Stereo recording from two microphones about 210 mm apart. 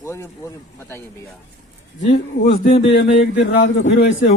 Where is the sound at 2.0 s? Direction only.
45° left (ahead or behind).